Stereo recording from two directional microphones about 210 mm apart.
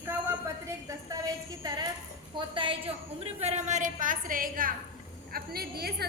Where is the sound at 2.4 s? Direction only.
25° right (ahead or behind).